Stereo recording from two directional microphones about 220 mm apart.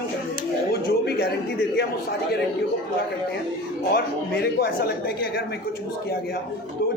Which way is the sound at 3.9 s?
45° left (ahead or behind).